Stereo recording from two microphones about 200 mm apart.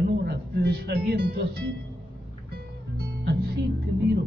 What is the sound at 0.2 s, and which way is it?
Music, 55° right (ahead or behind).